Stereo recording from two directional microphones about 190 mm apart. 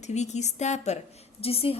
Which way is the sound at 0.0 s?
35° left (ahead or behind).